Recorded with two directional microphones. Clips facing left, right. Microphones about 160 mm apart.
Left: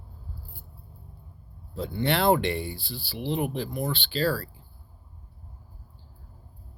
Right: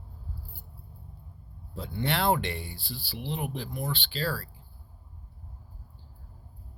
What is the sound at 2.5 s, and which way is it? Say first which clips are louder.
Speech: left 7 dB; 70° left (ahead or behind).